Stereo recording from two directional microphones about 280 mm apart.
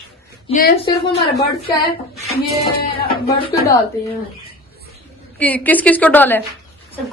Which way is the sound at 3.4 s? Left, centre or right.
Centre.